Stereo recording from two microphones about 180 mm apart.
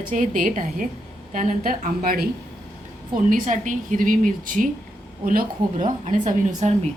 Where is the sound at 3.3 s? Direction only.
45° right (ahead or behind).